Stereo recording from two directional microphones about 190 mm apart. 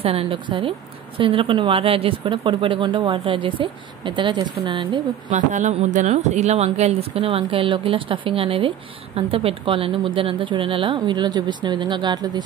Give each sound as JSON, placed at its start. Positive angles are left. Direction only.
{"t": 0.0, "sound": "a woman's voice", "side_deg": -30}
{"t": 5.3, "sound": "a woman's voice", "side_deg": -40}